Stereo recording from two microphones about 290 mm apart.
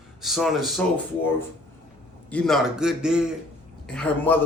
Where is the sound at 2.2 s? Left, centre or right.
Centre.